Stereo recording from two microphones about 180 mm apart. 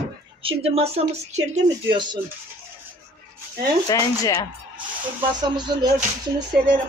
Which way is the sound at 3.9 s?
20° left (ahead or behind).